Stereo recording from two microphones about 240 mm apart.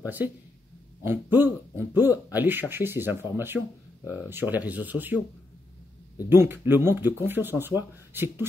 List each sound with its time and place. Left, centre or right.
0.0 s speech: centre
6.2 s speech: centre